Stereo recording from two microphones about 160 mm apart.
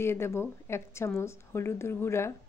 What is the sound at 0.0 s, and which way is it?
Speech, 15° left (ahead or behind).